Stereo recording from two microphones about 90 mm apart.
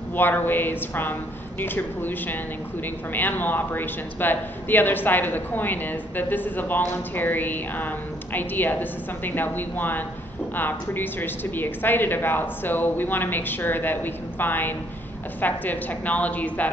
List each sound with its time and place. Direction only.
0.1 s a woman's voice: 20° left (ahead or behind)